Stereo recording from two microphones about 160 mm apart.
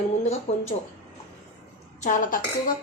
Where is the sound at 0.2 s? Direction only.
45° left (ahead or behind).